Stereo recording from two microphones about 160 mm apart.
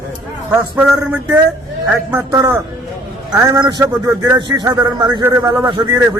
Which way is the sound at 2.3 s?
20° right (ahead or behind).